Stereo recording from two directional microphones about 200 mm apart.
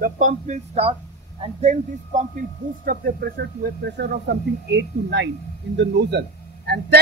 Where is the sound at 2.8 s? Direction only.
50° right (ahead or behind).